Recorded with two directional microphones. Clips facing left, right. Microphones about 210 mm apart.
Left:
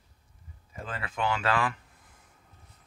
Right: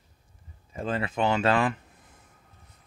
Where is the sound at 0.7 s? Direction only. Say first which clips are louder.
Right 8 dB; 25° right (ahead or behind).